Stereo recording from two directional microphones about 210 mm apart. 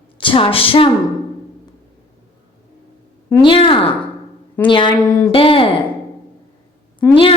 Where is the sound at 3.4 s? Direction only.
25° left (ahead or behind).